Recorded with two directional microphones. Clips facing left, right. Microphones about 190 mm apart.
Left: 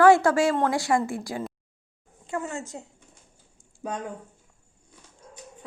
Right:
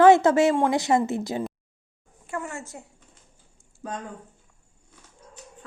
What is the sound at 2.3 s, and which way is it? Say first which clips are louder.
Speech: left 2 dB; 20° left (ahead or behind).